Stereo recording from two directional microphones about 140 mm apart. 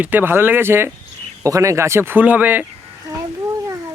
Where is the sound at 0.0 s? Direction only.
15° right (ahead or behind).